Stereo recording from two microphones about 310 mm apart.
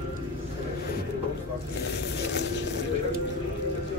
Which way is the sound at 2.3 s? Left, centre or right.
Left.